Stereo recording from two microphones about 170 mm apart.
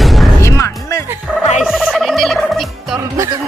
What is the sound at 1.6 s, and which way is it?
Speech, 5° right (ahead or behind).